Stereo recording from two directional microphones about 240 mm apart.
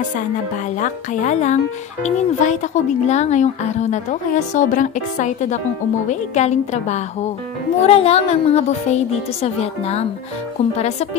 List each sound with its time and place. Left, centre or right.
0.7 s speech: left